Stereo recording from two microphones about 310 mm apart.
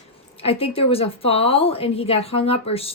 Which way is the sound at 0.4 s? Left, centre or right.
Centre.